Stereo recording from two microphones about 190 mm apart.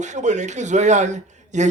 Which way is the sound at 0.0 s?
40° right (ahead or behind).